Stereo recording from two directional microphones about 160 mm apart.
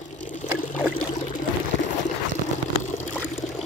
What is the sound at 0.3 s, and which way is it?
Pour, 50° left (ahead or behind).